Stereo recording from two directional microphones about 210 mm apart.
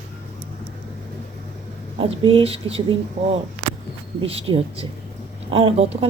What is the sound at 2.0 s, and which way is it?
Speech, 25° right (ahead or behind).